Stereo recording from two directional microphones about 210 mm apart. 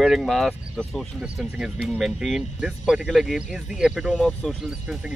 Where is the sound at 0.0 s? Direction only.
Centre (ahead or behind).